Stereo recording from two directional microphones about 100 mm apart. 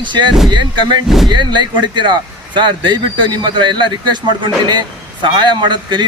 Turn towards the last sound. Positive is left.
turn(degrees=-50)  # may be behind; listen again after turning